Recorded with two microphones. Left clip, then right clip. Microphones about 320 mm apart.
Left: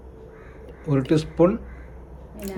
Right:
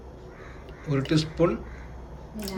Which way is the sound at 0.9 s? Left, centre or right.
Centre.